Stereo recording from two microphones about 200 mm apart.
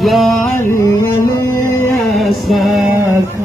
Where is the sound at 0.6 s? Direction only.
15° left (ahead or behind).